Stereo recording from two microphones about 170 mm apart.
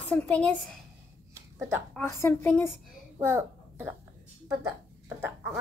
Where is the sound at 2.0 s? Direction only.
15° left (ahead or behind).